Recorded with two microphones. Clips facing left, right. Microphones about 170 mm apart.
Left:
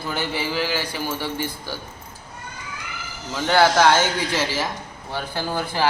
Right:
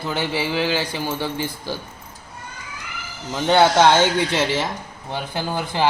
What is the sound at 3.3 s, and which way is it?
Speech, 20° right (ahead or behind).